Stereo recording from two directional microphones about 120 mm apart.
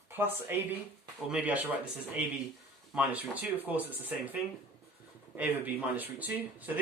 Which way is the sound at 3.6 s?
15° right (ahead or behind).